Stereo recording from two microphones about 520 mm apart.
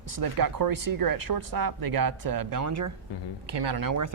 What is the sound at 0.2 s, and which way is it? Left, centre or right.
Speech, right.